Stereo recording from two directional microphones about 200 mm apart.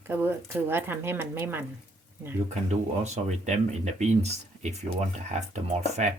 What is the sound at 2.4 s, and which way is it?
Speech, 35° right (ahead or behind).